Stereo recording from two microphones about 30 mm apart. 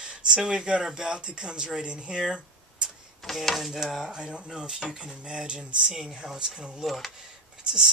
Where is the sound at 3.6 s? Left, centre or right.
Centre.